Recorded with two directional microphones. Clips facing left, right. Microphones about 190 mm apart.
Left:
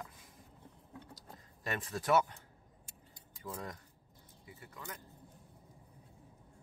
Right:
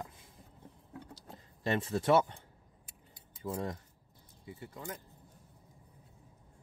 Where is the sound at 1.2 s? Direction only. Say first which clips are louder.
Right 3 dB; 30° right (ahead or behind).